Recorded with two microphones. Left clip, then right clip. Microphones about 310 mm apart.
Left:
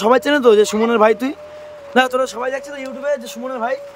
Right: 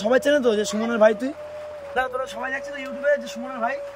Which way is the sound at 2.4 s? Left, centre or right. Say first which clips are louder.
Left 5 dB; centre.